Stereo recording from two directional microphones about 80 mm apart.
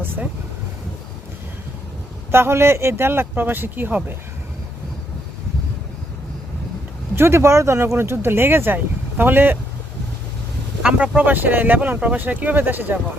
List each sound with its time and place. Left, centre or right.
0.0 s speech: right
2.3 s speech: right
7.2 s speech: right
10.8 s speech: centre